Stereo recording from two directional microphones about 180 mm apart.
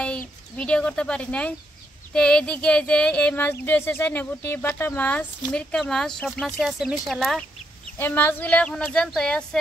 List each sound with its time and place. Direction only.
0.6 s speech: 5° left (ahead or behind)